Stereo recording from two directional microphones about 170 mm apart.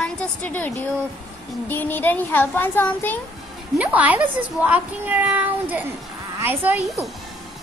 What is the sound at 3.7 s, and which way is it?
Speech, 10° right (ahead or behind).